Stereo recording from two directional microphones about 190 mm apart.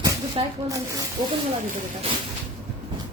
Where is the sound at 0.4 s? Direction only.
30° right (ahead or behind).